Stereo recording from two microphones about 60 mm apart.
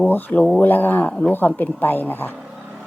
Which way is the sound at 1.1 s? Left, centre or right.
Centre.